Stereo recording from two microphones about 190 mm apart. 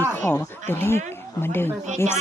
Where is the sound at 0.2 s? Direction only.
15° left (ahead or behind).